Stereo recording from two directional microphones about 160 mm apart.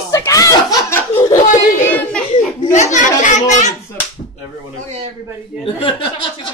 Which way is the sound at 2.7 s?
50° left (ahead or behind).